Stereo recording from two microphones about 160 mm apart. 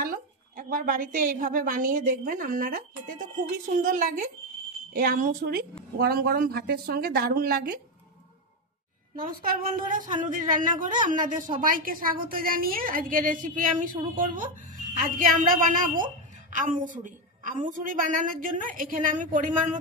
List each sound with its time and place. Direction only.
0.0 s a woman's voice: 60° right (ahead or behind)
9.1 s a woman's voice: 60° right (ahead or behind)